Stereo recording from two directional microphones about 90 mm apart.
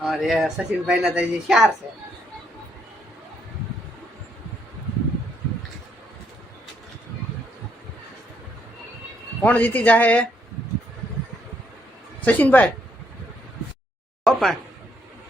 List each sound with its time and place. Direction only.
0.0 s speech: centre (ahead or behind)
9.4 s speech: 20° left (ahead or behind)
12.2 s speech: 20° left (ahead or behind)
14.3 s speech: centre (ahead or behind)